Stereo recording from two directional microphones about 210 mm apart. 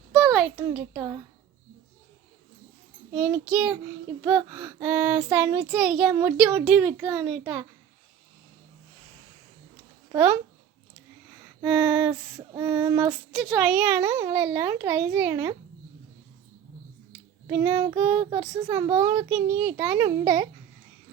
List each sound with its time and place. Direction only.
0.1 s a sound: centre (ahead or behind)
0.5 s child singing: 10° right (ahead or behind)
3.2 s a child's voice: 5° right (ahead or behind)
4.2 s child singing: 10° right (ahead or behind)
11.6 s a child's voice: 5° right (ahead or behind)
12.5 s child singing: 15° right (ahead or behind)
13.3 s child singing: centre (ahead or behind)
17.4 s child singing: 15° right (ahead or behind)